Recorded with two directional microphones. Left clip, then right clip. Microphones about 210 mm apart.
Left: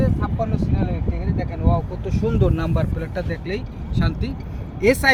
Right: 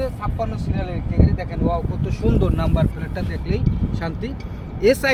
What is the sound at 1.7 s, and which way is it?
Speech, 25° left (ahead or behind).